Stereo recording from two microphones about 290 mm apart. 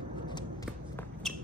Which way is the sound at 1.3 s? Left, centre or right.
Centre.